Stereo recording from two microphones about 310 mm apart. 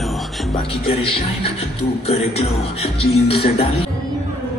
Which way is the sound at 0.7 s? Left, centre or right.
Centre.